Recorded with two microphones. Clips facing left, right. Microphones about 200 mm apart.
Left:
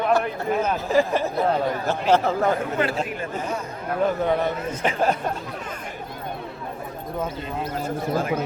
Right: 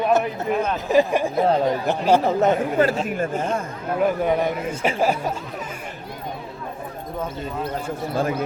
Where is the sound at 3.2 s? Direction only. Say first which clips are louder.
Right 5 dB; 50° right (ahead or behind).